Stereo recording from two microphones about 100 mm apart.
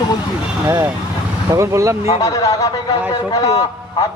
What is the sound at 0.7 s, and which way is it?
Speech, 25° right (ahead or behind).